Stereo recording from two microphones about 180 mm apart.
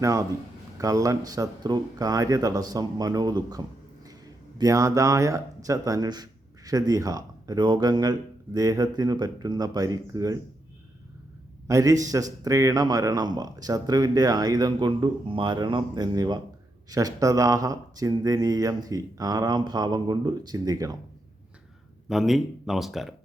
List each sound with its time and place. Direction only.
0.0 s a man's voice: 20° right (ahead or behind)
11.7 s a man's voice: 20° right (ahead or behind)
22.1 s speech: centre (ahead or behind)